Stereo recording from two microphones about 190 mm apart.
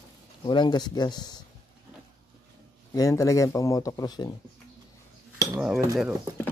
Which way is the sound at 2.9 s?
15° left (ahead or behind).